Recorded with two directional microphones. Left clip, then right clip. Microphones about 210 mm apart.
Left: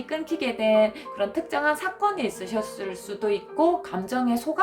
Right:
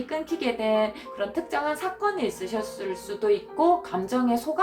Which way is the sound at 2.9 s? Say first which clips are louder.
Right 5 dB; 55° left (ahead or behind).